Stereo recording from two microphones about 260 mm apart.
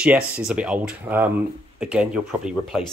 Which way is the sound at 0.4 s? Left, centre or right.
Centre.